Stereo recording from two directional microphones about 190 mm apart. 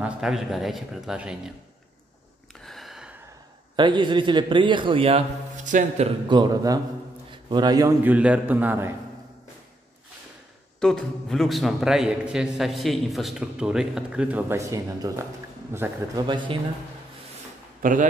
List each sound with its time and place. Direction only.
0.0 s a man's voice: 5° right (ahead or behind)
2.6 s gasp: centre (ahead or behind)
3.7 s a man's voice: 25° right (ahead or behind); by 6.0 s 40° right (ahead or behind)
6.2 s a man's voice: 25° right (ahead or behind)
7.2 s a sound: 25° right (ahead or behind)
8.0 s a man's voice: 10° right (ahead or behind)
10.8 s a man's voice: 5° left (ahead or behind); by 15.9 s 10° right (ahead or behind)
16.2 s a man's voice: 25° right (ahead or behind)